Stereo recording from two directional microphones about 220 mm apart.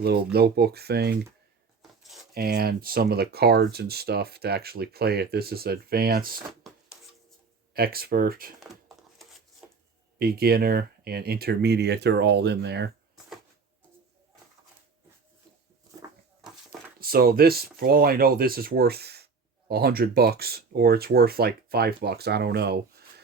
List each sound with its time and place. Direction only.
0.0 s speech: 45° right (ahead or behind)
1.8 s a sound: centre (ahead or behind)
2.3 s speech: 45° right (ahead or behind)
6.6 s a sound: centre (ahead or behind)
7.7 s speech: 45° right (ahead or behind)
10.2 s speech: 45° right (ahead or behind)
15.9 s dog: 15° right (ahead or behind)
17.0 s speech: 40° right (ahead or behind)